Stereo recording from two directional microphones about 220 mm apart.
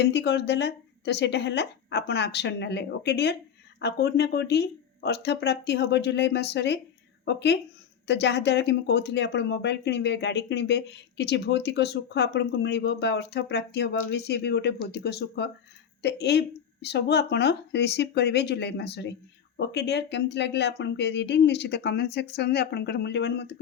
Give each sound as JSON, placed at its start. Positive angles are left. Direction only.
{"t": 0.0, "sound": "speech", "side_deg": 50}